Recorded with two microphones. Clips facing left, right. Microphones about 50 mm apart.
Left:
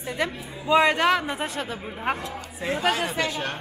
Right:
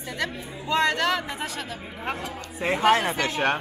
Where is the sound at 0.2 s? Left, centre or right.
Centre.